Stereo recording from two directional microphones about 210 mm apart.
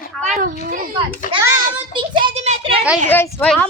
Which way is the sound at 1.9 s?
25° right (ahead or behind).